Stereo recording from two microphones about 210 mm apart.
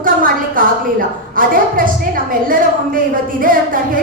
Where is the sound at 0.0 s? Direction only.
40° right (ahead or behind).